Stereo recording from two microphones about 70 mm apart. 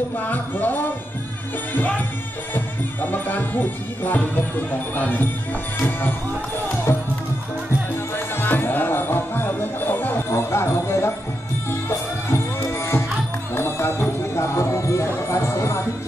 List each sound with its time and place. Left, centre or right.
0.2 s music: left
5.8 s speech: left
6.9 s music: left
8.4 s music: left
12.3 s music: left